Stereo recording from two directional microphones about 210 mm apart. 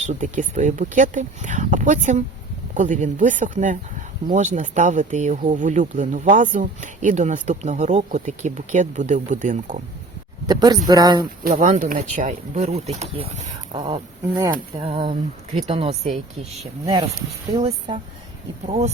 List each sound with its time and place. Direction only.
0.0 s speech: 35° right (ahead or behind)
10.4 s speech: 20° right (ahead or behind)
11.5 s speech: 35° right (ahead or behind)